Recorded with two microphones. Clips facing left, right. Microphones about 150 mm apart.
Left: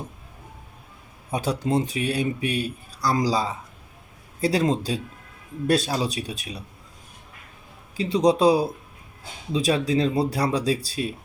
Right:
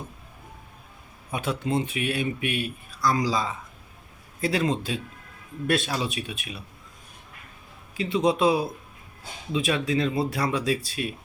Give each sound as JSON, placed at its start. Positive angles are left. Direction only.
{"t": 1.3, "sound": "a man's voice", "side_deg": 35}
{"t": 7.9, "sound": "speech", "side_deg": 35}